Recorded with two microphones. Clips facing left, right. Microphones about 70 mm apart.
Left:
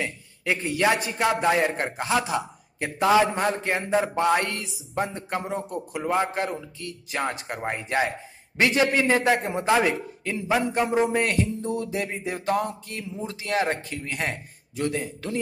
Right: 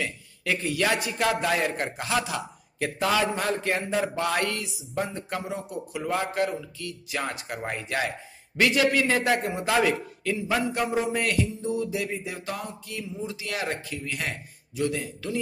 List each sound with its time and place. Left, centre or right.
0.0 s a man's voice: left
6.0 s a man's voice: left